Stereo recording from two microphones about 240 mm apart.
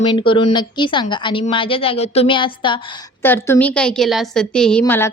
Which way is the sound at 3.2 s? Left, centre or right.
Centre.